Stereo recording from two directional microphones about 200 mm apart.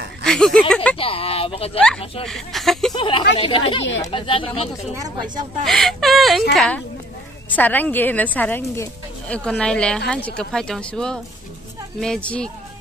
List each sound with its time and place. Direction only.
0.2 s speech: 5° left (ahead or behind)
0.9 s speech: 30° left (ahead or behind)
2.2 s speech: centre (ahead or behind)
2.9 s speech: 25° left (ahead or behind)
5.0 s speech: 20° right (ahead or behind)
5.7 s a sound: centre (ahead or behind)
6.5 s a woman's voice: centre (ahead or behind)